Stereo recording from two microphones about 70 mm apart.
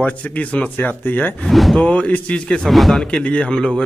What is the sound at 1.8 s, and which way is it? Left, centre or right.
Speech, centre.